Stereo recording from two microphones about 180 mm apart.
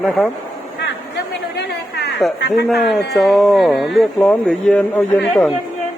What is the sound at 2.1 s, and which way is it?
Speech, centre (ahead or behind).